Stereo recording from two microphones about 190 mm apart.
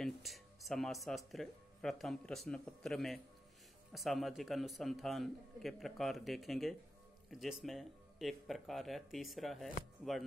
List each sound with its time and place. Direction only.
0.0 s a man's voice: centre (ahead or behind)